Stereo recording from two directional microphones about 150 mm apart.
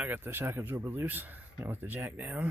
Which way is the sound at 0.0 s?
10° right (ahead or behind).